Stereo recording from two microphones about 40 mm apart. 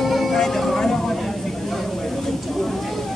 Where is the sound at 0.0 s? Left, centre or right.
Centre.